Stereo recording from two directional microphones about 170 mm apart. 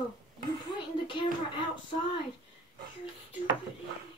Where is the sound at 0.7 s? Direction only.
30° left (ahead or behind).